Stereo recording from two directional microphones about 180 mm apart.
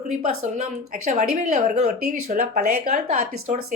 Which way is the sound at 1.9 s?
55° right (ahead or behind).